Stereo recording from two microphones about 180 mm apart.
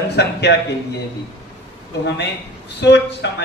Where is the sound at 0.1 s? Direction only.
70° left (ahead or behind).